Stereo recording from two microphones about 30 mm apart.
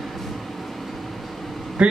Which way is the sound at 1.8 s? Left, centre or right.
Right.